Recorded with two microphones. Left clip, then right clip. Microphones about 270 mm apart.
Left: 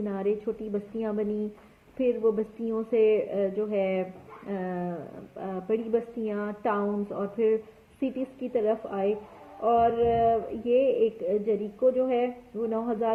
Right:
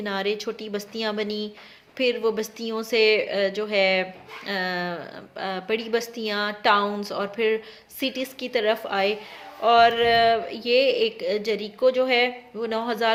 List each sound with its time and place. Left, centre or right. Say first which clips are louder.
0.0 s speech: right 3 dB; right